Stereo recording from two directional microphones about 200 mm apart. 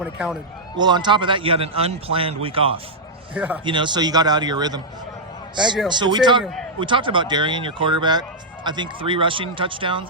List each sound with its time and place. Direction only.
0.0 s a man's voice: 5° right (ahead or behind)
0.8 s a man's voice: 20° right (ahead or behind)
3.3 s a man's voice: 5° right (ahead or behind)
3.6 s a man's voice: 25° right (ahead or behind)
5.5 s a man's voice: centre (ahead or behind)
5.9 s a man's voice: 20° right (ahead or behind)
6.4 s a man's voice: centre (ahead or behind)
6.7 s a man's voice: 25° right (ahead or behind)